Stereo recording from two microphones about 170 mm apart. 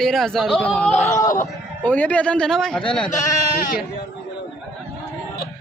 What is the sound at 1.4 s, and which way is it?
Speech, 10° left (ahead or behind).